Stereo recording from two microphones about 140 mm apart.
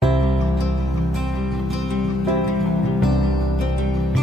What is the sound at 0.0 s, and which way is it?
Music, centre (ahead or behind).